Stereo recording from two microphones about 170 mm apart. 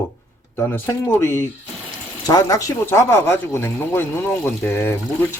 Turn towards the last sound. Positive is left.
turn(degrees=15)  # may be behind; listen again after turning